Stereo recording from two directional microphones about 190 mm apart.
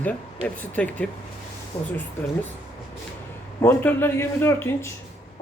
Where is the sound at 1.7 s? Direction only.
30° left (ahead or behind).